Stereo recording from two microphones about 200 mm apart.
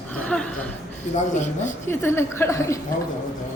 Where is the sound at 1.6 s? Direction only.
10° left (ahead or behind).